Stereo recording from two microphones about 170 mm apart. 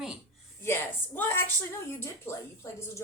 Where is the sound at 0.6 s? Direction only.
10° left (ahead or behind).